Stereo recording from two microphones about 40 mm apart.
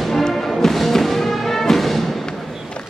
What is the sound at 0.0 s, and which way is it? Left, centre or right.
Music, centre.